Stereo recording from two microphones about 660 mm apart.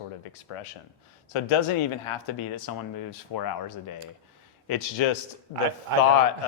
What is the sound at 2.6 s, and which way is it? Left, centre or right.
Speech, left.